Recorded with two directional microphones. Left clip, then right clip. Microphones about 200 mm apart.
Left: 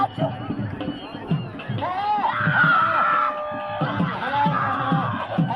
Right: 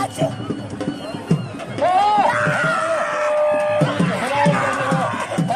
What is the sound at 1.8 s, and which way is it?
Music, 55° right (ahead or behind).